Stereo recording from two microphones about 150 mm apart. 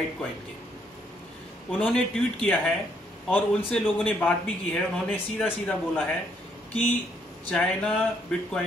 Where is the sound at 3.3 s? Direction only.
5° left (ahead or behind).